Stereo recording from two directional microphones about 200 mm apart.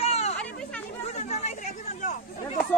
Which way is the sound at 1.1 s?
35° left (ahead or behind).